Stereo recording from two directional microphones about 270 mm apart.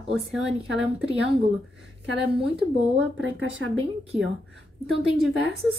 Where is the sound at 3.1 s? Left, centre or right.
Right.